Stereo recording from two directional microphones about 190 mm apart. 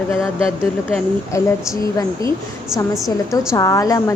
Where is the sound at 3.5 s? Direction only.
15° left (ahead or behind).